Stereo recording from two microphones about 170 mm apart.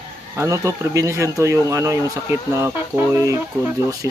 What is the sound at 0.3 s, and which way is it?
Speech, 15° right (ahead or behind).